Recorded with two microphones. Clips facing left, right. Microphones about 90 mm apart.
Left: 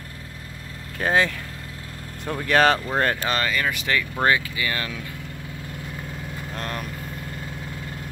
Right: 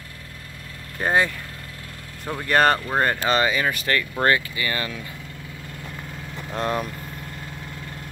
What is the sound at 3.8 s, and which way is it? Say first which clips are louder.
Speech: even; 10° left (ahead or behind).